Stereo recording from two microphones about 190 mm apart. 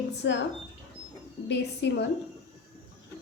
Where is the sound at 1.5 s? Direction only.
65° left (ahead or behind).